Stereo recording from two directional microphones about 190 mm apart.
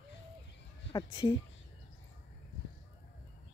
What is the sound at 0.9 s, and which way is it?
Speech, 25° left (ahead or behind).